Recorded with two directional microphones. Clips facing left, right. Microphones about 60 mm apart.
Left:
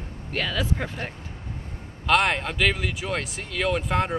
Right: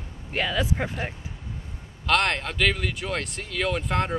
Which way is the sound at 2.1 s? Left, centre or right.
Centre.